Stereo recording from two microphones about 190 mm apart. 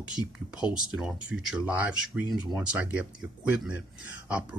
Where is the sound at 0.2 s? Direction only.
25° left (ahead or behind).